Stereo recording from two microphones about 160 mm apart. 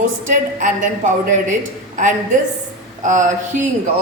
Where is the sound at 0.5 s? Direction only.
55° right (ahead or behind).